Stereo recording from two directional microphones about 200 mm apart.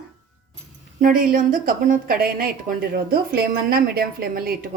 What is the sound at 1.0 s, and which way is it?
A woman's voice, 40° right (ahead or behind).